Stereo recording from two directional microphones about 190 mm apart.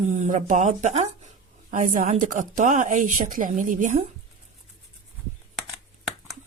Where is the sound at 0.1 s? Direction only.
40° right (ahead or behind).